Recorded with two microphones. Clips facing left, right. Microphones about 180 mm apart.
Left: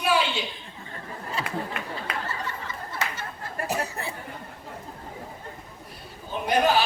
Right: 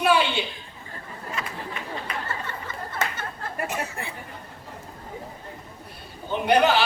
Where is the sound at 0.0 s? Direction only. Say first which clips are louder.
Right 3 dB; 60° right (ahead or behind).